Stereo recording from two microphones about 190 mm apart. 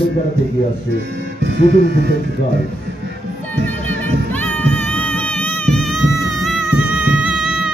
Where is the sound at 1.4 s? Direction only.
60° right (ahead or behind).